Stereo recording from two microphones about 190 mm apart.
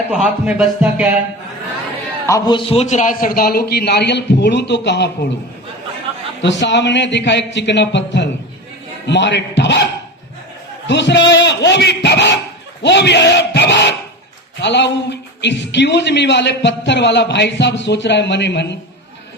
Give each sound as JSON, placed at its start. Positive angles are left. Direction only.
{"t": 0.1, "sound": "speech", "side_deg": -5}
{"t": 2.2, "sound": "a man's voice", "side_deg": 20}
{"t": 6.4, "sound": "a man's voice", "side_deg": 70}
{"t": 10.8, "sound": "a man's voice", "side_deg": 65}